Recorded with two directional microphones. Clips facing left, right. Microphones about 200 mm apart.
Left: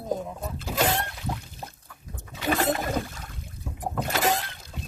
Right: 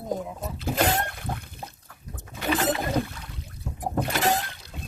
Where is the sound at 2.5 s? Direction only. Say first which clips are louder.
Even; 50° left (ahead or behind).